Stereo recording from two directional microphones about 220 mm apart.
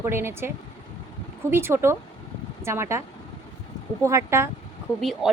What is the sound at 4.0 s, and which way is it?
Speech, 15° right (ahead or behind).